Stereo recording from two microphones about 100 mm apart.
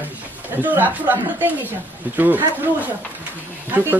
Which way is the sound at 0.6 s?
15° right (ahead or behind).